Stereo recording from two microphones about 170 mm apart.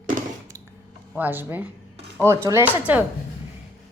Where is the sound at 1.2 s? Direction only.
10° right (ahead or behind).